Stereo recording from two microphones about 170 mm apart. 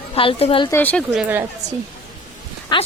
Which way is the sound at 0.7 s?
10° left (ahead or behind).